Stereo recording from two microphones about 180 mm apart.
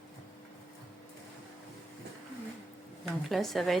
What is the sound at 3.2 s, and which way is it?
Speech, centre (ahead or behind).